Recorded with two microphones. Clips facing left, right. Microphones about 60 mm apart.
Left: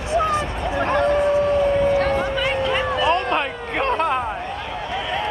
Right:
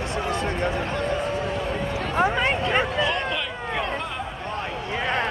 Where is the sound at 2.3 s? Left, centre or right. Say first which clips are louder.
Left 1 dB; right.